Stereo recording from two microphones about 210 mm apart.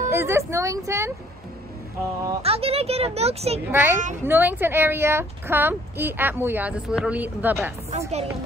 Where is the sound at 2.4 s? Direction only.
30° right (ahead or behind).